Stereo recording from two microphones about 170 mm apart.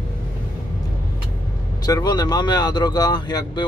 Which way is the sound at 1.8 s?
25° left (ahead or behind).